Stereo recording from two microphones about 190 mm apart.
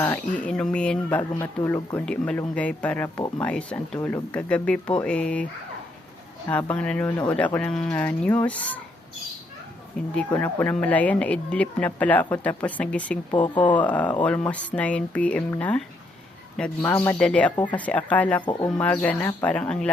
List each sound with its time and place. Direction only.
0.0 s speech: 10° left (ahead or behind)
6.5 s speech: 5° left (ahead or behind)
10.0 s speech: 5° left (ahead or behind)
13.3 s speech: 25° left (ahead or behind)
13.7 s speech: 10° left (ahead or behind)